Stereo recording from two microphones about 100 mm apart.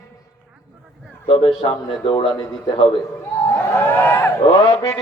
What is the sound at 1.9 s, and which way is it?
Speech, 60° left (ahead or behind).